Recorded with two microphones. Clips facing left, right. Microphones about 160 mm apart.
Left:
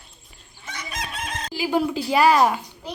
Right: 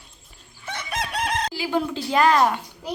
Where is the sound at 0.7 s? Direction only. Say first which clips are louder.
Right 4 dB; 60° right (ahead or behind).